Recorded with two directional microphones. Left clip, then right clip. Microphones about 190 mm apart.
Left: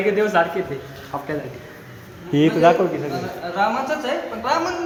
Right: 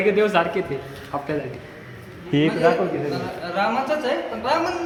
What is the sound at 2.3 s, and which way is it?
Speech, 10° left (ahead or behind).